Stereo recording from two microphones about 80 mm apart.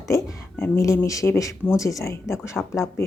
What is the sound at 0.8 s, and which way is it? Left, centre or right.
Speech, left.